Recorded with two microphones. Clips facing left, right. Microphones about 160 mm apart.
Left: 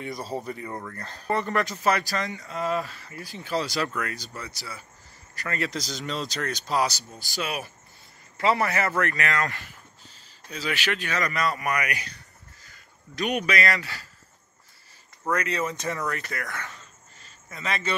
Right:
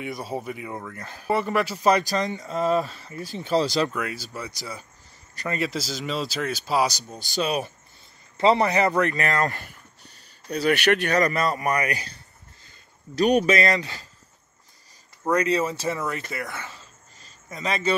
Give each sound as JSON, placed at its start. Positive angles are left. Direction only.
{"t": 0.0, "sound": "speech", "side_deg": 0}
{"t": 5.7, "sound": "speech", "side_deg": -5}
{"t": 9.1, "sound": "a man's voice", "side_deg": -40}
{"t": 10.5, "sound": "speech", "side_deg": -60}
{"t": 11.1, "sound": "a man's voice", "side_deg": -35}
{"t": 12.6, "sound": "a sound", "side_deg": -30}
{"t": 13.6, "sound": "speech", "side_deg": -20}
{"t": 15.3, "sound": "a man's voice", "side_deg": -35}
{"t": 16.1, "sound": "speech", "side_deg": -20}